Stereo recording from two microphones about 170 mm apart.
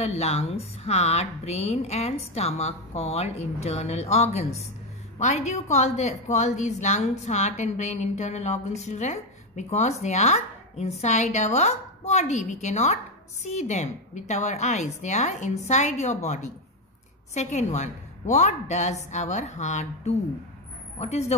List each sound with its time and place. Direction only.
0.0 s a woman's voice: 40° left (ahead or behind)